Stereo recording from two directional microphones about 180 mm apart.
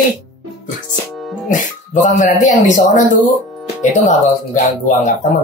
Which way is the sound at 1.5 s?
45° left (ahead or behind).